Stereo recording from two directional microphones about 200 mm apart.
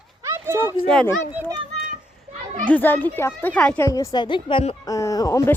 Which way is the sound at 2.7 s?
10° left (ahead or behind).